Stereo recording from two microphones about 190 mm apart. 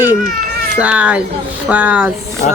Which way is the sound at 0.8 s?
5° right (ahead or behind).